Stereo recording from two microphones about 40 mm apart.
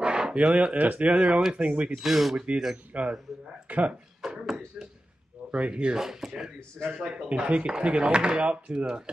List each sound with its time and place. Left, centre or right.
0.0 s a sound: right
0.7 s speech: right
2.0 s speech: centre
2.3 s speech: right
4.2 s a sound: centre
5.5 s speech: right
5.9 s speech: centre